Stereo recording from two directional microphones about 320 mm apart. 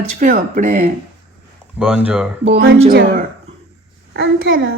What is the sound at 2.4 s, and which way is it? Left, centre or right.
Speech, right.